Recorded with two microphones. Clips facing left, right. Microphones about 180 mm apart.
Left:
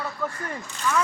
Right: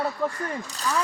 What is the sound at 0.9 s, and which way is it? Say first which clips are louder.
Speech: left 2 dB; 35° right (ahead or behind).